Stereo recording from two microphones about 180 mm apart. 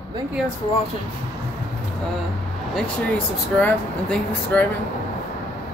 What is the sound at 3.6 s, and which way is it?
Speech, 10° left (ahead or behind).